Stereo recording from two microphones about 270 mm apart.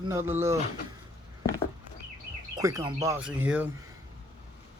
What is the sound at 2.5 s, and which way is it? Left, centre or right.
Speech, centre.